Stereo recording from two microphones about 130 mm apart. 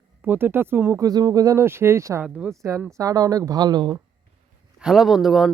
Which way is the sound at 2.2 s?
10° right (ahead or behind).